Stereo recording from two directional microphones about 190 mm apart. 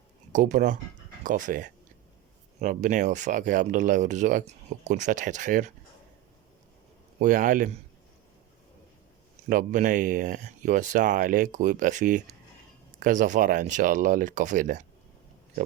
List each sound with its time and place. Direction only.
0.3 s speech: 40° right (ahead or behind)
7.2 s speech: 45° right (ahead or behind)
9.5 s speech: 45° right (ahead or behind)